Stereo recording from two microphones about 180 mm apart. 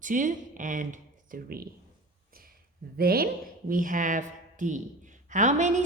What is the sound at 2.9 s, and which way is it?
A woman's voice, 55° right (ahead or behind).